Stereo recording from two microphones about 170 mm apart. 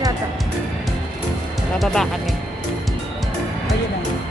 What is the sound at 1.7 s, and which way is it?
Speech, centre (ahead or behind).